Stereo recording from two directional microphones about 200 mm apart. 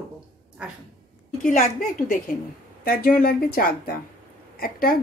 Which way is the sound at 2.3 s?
45° left (ahead or behind).